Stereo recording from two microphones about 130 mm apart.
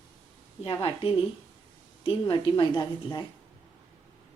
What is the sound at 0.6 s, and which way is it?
A woman's voice, 45° left (ahead or behind).